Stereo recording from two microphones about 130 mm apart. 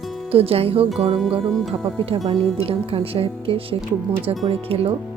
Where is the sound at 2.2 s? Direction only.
45° right (ahead or behind).